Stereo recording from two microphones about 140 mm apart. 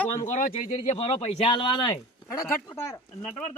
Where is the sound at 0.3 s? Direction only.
65° left (ahead or behind).